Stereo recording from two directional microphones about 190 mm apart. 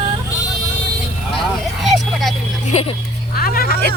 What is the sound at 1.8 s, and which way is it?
Vehicle, centre (ahead or behind).